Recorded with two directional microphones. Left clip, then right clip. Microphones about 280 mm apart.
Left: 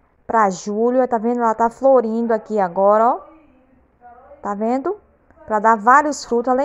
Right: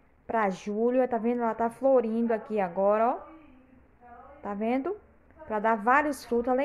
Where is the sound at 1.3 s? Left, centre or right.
Centre.